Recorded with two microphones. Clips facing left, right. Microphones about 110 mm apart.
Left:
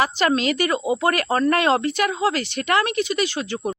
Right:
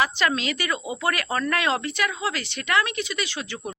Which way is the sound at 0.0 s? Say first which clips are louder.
Left 4 dB; 45° left (ahead or behind).